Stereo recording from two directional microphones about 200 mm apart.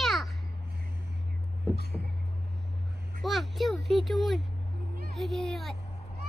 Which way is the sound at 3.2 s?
Centre (ahead or behind).